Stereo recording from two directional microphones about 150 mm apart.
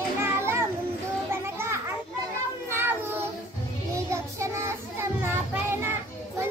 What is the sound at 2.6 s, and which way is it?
Child singing, 15° right (ahead or behind).